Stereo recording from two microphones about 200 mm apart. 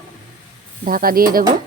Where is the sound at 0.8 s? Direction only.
45° right (ahead or behind).